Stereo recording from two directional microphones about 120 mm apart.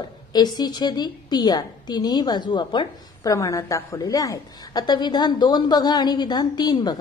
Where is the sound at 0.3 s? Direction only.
35° left (ahead or behind).